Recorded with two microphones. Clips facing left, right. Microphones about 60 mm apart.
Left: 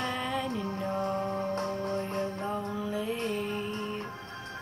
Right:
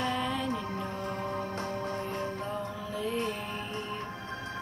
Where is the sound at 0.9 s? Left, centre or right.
Left.